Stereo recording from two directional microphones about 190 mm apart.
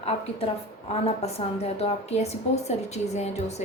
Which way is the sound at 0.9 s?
30° left (ahead or behind).